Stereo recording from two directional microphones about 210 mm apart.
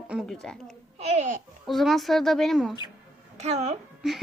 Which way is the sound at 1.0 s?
30° right (ahead or behind).